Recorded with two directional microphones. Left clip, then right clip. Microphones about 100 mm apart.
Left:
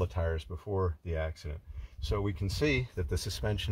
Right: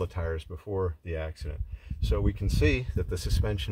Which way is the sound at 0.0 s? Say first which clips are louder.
Right 1 dB; 35° left (ahead or behind).